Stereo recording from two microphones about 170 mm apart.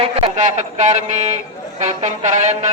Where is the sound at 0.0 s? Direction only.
40° right (ahead or behind).